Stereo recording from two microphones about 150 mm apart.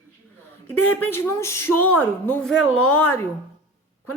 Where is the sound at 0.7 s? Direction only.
10° left (ahead or behind).